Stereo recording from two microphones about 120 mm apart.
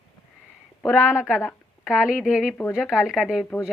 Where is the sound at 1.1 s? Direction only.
5° right (ahead or behind).